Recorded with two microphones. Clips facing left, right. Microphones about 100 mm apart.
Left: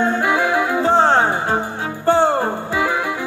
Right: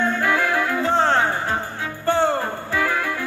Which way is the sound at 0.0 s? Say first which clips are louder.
Left 3 dB; 20° left (ahead or behind).